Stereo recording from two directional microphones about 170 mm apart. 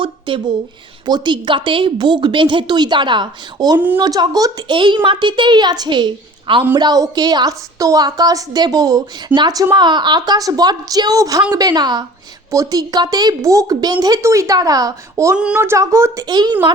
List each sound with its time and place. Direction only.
0.0 s a woman's voice: 30° right (ahead or behind)
3.8 s speech: 10° right (ahead or behind)
4.0 s a woman's voice: 25° right (ahead or behind)